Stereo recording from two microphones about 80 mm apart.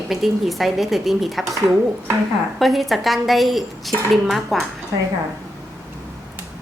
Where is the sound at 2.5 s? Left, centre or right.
Centre.